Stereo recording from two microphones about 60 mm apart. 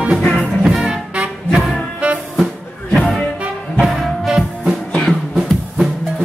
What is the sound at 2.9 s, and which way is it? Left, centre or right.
Music, centre.